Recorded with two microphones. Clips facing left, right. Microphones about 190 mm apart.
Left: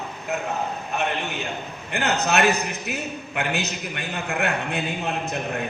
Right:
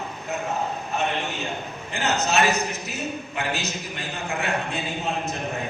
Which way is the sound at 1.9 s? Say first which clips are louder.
Left 2 dB; 60° left (ahead or behind).